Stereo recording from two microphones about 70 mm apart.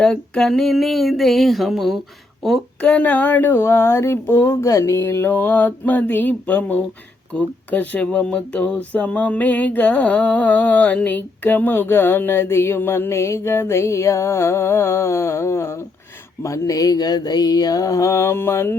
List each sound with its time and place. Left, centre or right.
0.0 s a sound: centre
2.8 s speech: left
16.4 s mantra: left